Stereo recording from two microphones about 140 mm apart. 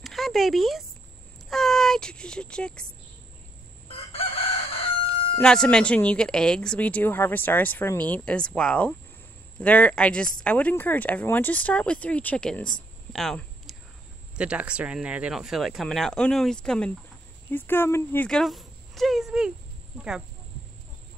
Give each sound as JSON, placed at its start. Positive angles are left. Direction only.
{"t": 0.0, "sound": "a sound", "side_deg": 0}
{"t": 1.5, "sound": "speech", "side_deg": 0}
{"t": 3.9, "sound": "chicken", "side_deg": 45}
{"t": 5.4, "sound": "speech", "side_deg": 5}
{"t": 14.3, "sound": "speech", "side_deg": -10}